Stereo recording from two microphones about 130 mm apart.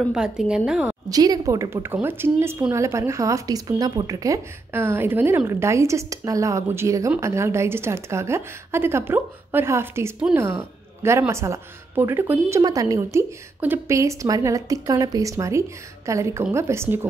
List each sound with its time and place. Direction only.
0.1 s a woman's voice: 5° right (ahead or behind)
1.1 s speech: 30° right (ahead or behind)